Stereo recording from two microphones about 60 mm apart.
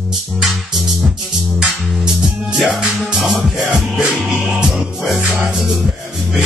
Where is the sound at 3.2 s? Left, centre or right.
Centre.